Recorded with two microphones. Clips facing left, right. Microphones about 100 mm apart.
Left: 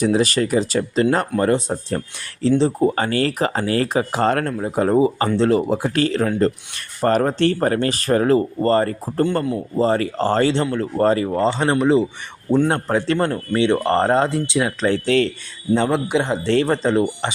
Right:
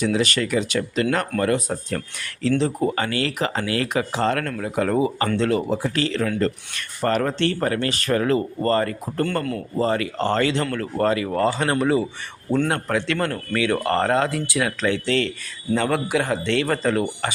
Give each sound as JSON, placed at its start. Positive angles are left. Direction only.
{"t": 0.0, "sound": "a man's voice", "side_deg": 40}
{"t": 4.4, "sound": "a man's voice", "side_deg": 30}
{"t": 5.0, "sound": "speech", "side_deg": 15}
{"t": 5.4, "sound": "speech", "side_deg": 35}
{"t": 5.7, "sound": "speech", "side_deg": 50}
{"t": 9.2, "sound": "speech", "side_deg": 15}
{"t": 9.8, "sound": "speech", "side_deg": 30}
{"t": 10.7, "sound": "a man's voice", "side_deg": 20}
{"t": 11.0, "sound": "speech", "side_deg": 35}
{"t": 11.3, "sound": "a man's voice", "side_deg": 25}
{"t": 14.8, "sound": "speech", "side_deg": 45}
{"t": 15.7, "sound": "a man's voice", "side_deg": 25}